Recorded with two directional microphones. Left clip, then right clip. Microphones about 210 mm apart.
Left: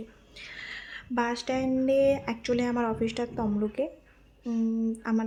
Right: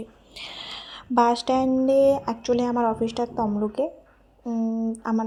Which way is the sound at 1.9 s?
10° right (ahead or behind).